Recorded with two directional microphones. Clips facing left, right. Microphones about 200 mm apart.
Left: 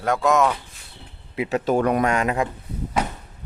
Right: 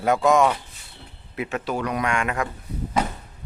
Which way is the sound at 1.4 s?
35° left (ahead or behind).